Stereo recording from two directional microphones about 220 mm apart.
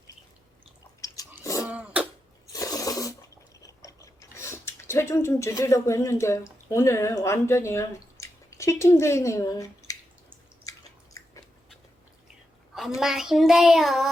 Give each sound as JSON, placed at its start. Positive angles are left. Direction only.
{"t": 1.0, "sound": "a sound", "side_deg": 15}
{"t": 1.5, "sound": "cough", "side_deg": 15}
{"t": 1.7, "sound": "cough", "side_deg": -5}
{"t": 2.5, "sound": "drip", "side_deg": 15}
{"t": 6.7, "sound": "speech", "side_deg": 10}
{"t": 10.7, "sound": "biting", "side_deg": 15}
{"t": 13.0, "sound": "child singing", "side_deg": 0}